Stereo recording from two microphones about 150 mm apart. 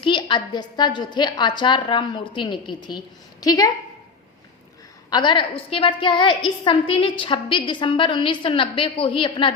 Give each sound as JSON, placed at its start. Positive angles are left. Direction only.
{"t": 0.0, "sound": "a woman's voice", "side_deg": 30}
{"t": 5.1, "sound": "a woman's voice", "side_deg": 30}